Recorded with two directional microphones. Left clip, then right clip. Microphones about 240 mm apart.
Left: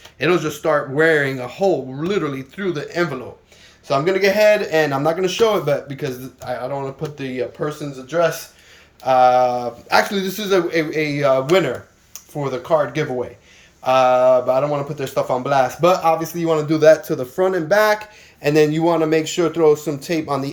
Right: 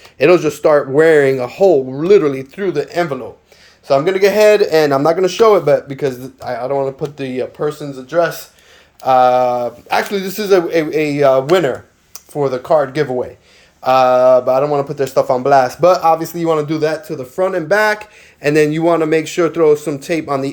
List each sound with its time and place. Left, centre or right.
0.2 s speech: right
16.6 s speech: centre